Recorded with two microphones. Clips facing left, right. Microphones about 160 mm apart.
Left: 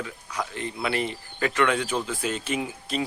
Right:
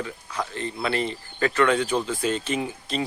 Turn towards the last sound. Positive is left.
turn(degrees=5)  # may be behind; listen again after turning